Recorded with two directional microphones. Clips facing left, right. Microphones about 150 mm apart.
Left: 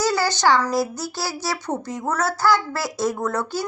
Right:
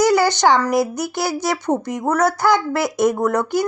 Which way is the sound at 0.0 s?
20° right (ahead or behind).